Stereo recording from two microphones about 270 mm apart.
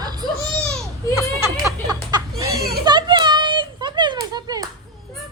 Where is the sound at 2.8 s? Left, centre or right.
Centre.